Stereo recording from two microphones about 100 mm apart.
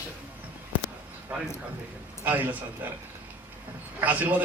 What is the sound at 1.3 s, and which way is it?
A man's voice, 15° right (ahead or behind).